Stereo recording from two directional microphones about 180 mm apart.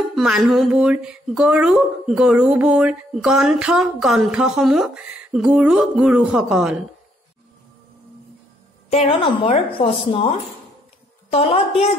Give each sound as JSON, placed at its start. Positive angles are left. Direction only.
{"t": 0.1, "sound": "speech", "side_deg": 0}
{"t": 8.9, "sound": "a woman's voice", "side_deg": 30}